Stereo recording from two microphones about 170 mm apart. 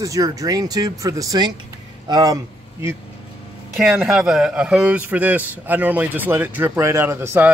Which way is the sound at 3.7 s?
5° right (ahead or behind).